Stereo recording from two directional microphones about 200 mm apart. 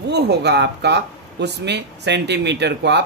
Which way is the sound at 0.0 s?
55° right (ahead or behind).